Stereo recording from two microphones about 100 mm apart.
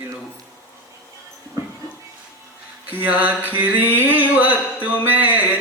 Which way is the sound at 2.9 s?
15° right (ahead or behind).